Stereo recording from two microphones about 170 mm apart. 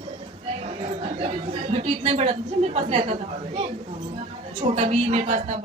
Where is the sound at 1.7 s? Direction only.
35° right (ahead or behind).